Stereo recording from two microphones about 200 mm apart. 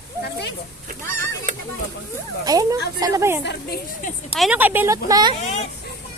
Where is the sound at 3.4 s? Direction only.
55° left (ahead or behind).